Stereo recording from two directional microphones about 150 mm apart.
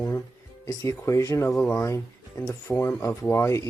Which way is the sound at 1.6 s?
10° left (ahead or behind).